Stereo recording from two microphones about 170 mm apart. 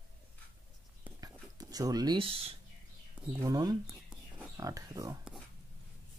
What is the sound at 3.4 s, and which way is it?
Speech, 20° right (ahead or behind).